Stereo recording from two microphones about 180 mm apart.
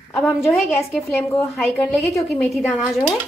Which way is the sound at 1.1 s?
15° left (ahead or behind).